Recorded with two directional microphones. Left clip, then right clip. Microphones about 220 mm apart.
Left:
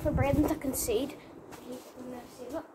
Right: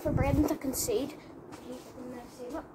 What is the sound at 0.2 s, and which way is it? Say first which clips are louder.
Speech: left 1 dB; 5° left (ahead or behind).